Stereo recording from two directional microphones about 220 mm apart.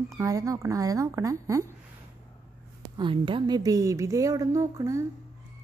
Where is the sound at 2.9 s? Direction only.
20° right (ahead or behind).